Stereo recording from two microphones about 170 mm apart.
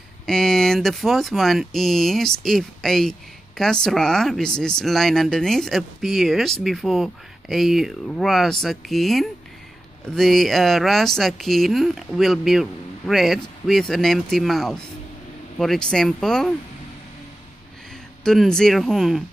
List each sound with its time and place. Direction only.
0.3 s speech: 5° left (ahead or behind)
18.2 s speech: 5° left (ahead or behind)